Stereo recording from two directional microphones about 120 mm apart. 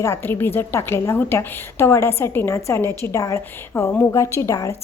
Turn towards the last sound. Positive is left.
turn(degrees=25)  # may be behind; listen again after turning